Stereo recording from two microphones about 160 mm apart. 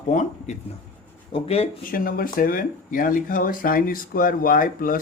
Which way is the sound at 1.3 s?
35° left (ahead or behind).